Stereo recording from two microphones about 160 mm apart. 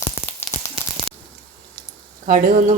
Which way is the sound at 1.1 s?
Centre (ahead or behind).